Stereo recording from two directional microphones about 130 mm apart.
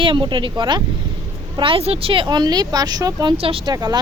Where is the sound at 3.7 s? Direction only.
30° right (ahead or behind).